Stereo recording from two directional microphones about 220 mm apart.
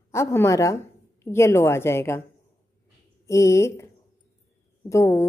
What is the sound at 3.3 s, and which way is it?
A woman's voice, 15° left (ahead or behind).